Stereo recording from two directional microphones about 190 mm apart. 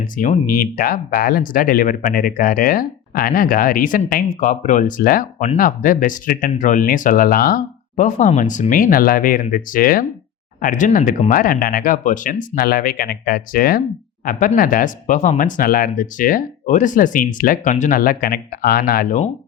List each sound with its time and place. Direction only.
0.0 s speech: 45° left (ahead or behind)